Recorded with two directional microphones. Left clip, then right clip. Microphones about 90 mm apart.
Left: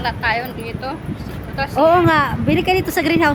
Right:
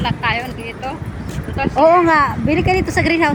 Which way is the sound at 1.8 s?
5° left (ahead or behind).